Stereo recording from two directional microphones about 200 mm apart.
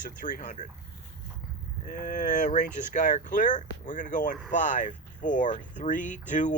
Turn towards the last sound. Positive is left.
turn(degrees=40)  # may be behind; listen again after turning